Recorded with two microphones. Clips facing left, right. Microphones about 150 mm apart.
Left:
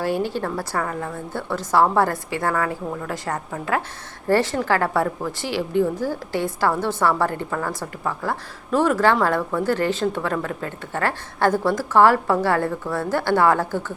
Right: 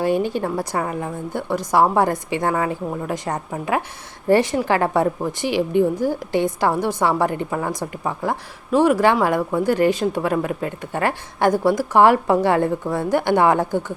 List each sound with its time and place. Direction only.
0.0 s a woman's voice: 20° right (ahead or behind)